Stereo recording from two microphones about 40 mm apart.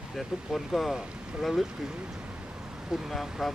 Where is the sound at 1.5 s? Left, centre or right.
Centre.